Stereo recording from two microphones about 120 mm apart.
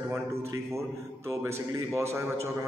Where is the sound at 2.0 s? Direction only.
20° right (ahead or behind).